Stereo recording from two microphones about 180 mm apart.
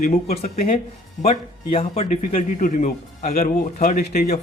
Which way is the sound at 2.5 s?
45° left (ahead or behind).